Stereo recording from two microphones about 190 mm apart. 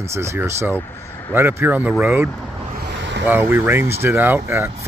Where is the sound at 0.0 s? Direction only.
15° right (ahead or behind).